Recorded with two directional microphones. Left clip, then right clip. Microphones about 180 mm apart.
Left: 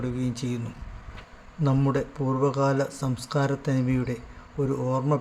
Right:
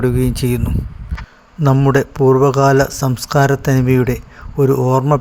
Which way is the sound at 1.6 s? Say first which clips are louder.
Right 12 dB; 40° right (ahead or behind).